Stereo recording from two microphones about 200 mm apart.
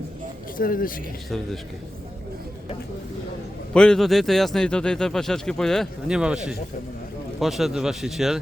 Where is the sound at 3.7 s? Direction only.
5° left (ahead or behind).